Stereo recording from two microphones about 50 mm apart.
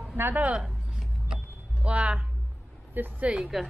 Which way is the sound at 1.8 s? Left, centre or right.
Right.